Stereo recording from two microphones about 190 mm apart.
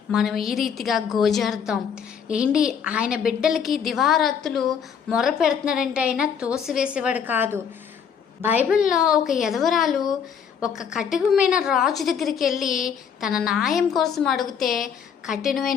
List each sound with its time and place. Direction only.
0.1 s a woman's voice: centre (ahead or behind)